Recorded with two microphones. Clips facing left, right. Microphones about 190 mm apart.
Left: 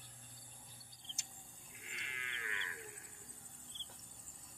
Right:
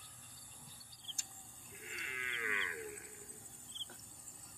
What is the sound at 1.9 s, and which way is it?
Wild animals, 50° right (ahead or behind).